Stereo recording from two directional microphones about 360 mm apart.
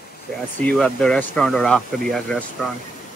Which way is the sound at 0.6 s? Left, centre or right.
Centre.